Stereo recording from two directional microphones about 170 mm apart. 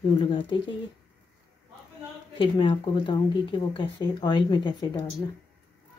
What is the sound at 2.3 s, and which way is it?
Speech, 30° left (ahead or behind).